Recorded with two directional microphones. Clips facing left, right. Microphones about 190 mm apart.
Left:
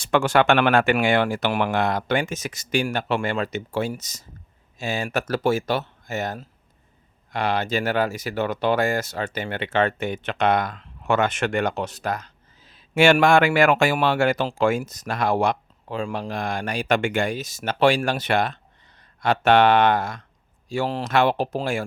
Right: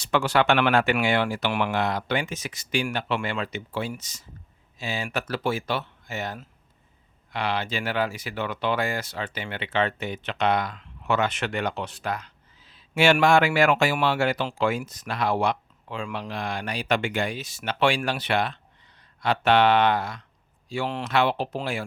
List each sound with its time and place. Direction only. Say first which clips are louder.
0.0 s speech: left 3 dB; 50° left (ahead or behind)